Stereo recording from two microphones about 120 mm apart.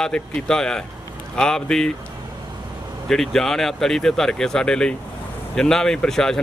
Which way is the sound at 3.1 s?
5° left (ahead or behind).